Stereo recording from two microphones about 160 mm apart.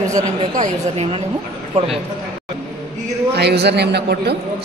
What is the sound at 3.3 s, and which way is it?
A man's voice, 90° right.